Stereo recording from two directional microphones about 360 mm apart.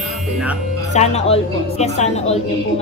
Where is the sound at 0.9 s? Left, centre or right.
Centre.